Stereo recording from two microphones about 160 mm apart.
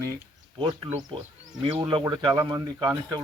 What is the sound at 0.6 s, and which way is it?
Speech, 30° right (ahead or behind).